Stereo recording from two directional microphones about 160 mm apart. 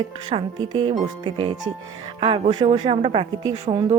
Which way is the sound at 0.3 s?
30° right (ahead or behind).